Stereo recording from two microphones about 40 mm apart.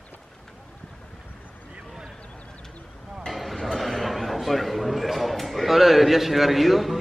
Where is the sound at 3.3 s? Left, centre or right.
Centre.